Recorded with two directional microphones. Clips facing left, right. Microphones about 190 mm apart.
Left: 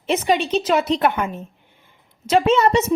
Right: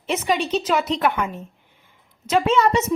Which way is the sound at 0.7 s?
30° left (ahead or behind).